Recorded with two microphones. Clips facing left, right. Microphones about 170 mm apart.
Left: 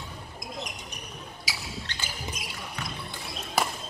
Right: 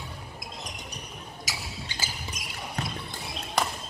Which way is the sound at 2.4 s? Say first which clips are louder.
Right 2 dB; 45° right (ahead or behind).